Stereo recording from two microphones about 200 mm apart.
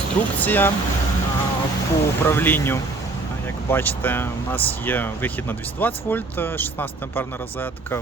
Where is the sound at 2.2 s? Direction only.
10° left (ahead or behind).